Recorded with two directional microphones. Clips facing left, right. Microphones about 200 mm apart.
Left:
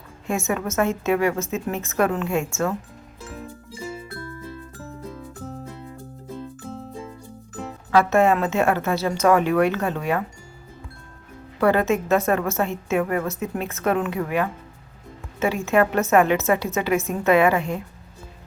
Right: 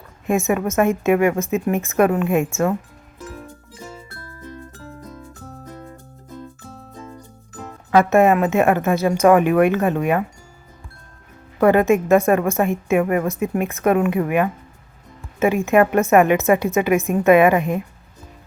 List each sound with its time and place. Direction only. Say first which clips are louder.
0.3 s a woman's voice: right 6 dB; 15° right (ahead or behind)
7.9 s a woman's voice: right 3 dB; 15° right (ahead or behind)
11.6 s a woman's voice: right 5 dB; 15° right (ahead or behind)